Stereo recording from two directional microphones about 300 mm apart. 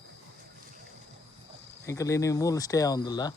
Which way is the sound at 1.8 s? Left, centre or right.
Centre.